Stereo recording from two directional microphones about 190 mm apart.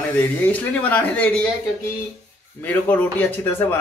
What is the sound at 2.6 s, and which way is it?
Speech, 10° left (ahead or behind).